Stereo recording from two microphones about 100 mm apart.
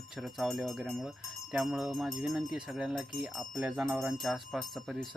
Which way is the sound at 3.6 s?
20° right (ahead or behind).